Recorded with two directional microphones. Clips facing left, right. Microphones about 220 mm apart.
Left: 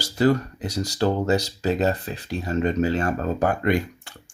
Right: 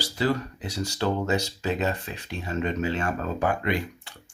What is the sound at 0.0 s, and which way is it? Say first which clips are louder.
Speech: left 6 dB; 45° left (ahead or behind).